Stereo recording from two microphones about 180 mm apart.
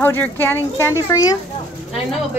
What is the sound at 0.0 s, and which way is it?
Speech, 10° left (ahead or behind).